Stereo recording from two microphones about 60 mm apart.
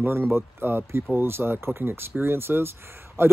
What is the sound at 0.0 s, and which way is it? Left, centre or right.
A man's voice, right.